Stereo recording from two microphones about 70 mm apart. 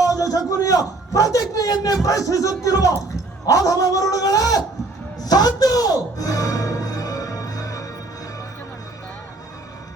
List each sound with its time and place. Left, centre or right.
0.0 s a man's voice: left
5.2 s music: left